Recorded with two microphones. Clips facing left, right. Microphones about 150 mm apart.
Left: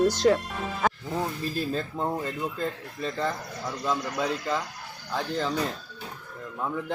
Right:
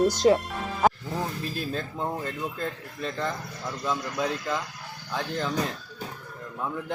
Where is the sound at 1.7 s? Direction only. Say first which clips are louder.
Left 2 dB; 5° left (ahead or behind).